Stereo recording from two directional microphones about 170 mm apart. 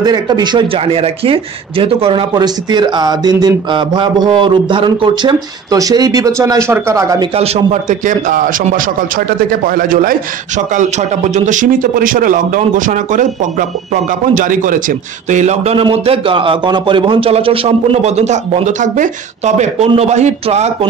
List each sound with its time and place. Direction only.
0.0 s speech: 25° right (ahead or behind)
7.3 s speech: 35° right (ahead or behind)